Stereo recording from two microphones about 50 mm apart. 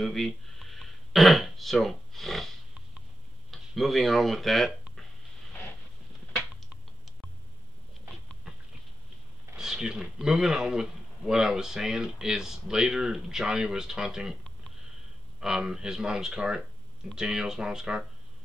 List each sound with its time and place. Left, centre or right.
0.0 s speech: centre
3.5 s speech: centre
9.6 s a man's voice: centre
15.6 s a man's voice: centre